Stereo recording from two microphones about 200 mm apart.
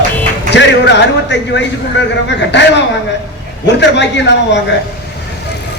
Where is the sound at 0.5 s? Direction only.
60° left (ahead or behind).